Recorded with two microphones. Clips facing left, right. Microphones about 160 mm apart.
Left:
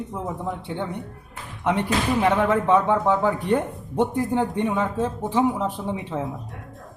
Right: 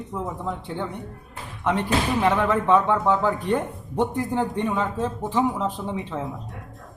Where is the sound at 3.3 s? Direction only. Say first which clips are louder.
Left 1 dB; 5° left (ahead or behind).